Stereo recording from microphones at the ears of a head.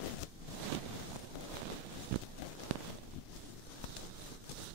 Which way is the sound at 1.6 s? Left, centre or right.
Right.